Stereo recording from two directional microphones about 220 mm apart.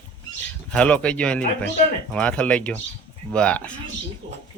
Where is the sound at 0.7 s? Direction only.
5° left (ahead or behind).